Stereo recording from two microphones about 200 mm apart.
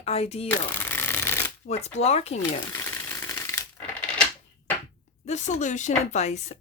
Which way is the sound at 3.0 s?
10° left (ahead or behind).